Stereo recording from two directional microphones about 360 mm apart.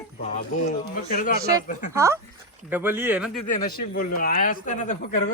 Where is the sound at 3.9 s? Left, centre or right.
Left.